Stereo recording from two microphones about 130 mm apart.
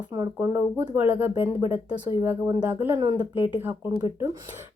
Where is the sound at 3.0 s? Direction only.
35° right (ahead or behind).